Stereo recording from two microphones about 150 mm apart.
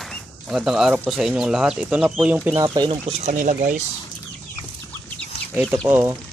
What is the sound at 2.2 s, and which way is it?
Speech, 10° right (ahead or behind).